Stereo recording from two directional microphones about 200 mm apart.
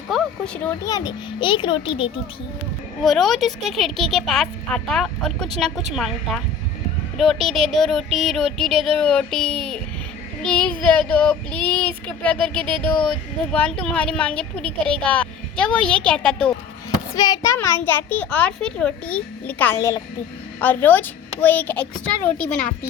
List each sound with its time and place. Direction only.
0.1 s a sound: 5° left (ahead or behind)
0.9 s a child's voice: 20° left (ahead or behind)
3.0 s a woman's voice: centre (ahead or behind)
17.2 s a child's voice: 20° left (ahead or behind)